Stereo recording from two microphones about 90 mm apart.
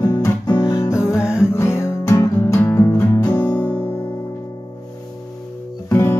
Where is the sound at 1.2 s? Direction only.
10° right (ahead or behind).